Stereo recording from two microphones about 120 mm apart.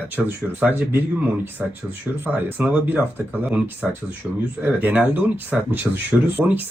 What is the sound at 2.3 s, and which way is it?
Speech, 15° right (ahead or behind).